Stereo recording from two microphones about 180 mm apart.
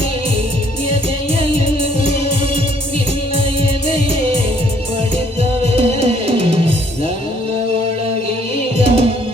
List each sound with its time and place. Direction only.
1.4 s music: 30° right (ahead or behind)
3.8 s music: 30° right (ahead or behind)
5.7 s music: 35° right (ahead or behind)
8.8 s music: 35° right (ahead or behind)